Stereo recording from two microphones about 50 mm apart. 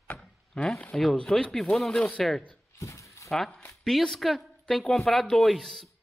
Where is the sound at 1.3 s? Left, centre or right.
Centre.